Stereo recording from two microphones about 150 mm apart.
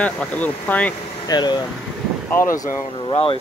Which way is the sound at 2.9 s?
35° left (ahead or behind).